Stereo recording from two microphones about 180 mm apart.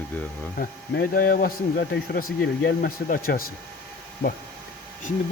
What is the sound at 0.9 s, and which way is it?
Speech, 55° left (ahead or behind).